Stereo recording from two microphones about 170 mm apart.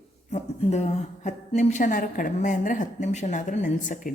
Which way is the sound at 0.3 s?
45° left (ahead or behind).